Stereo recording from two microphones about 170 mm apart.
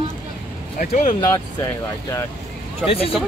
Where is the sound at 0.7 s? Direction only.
55° left (ahead or behind).